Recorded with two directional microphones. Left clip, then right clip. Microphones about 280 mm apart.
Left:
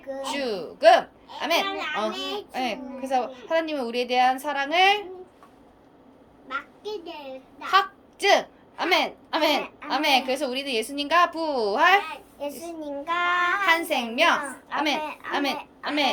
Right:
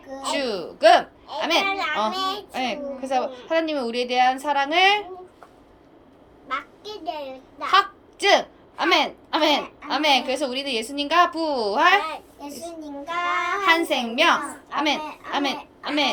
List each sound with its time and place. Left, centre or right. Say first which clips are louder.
0.1 s a child's voice: right 3 dB; centre
6.5 s a child's voice: right 2 dB; centre